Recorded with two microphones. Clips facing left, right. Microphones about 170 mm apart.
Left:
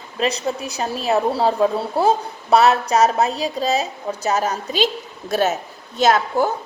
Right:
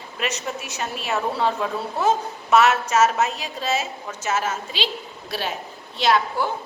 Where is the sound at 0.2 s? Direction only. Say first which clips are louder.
Left 7 dB; 35° left (ahead or behind).